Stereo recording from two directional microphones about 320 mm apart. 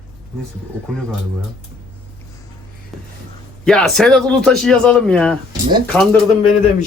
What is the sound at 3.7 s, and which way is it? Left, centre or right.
A man's voice, centre.